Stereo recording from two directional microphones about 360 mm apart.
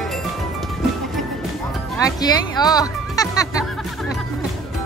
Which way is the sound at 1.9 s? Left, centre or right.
Centre.